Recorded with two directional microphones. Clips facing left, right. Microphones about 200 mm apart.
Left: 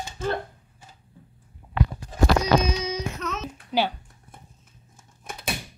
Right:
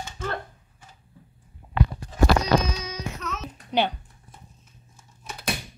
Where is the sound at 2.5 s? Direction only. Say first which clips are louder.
Left 2 dB; 20° left (ahead or behind).